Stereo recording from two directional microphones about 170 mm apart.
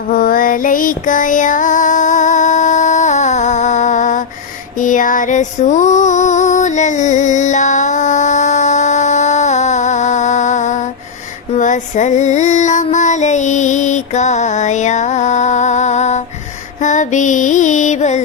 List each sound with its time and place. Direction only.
0.1 s female singing: 55° left (ahead or behind)
4.8 s music: 50° left (ahead or behind)
11.5 s child singing: 45° left (ahead or behind)
16.8 s music: 45° left (ahead or behind)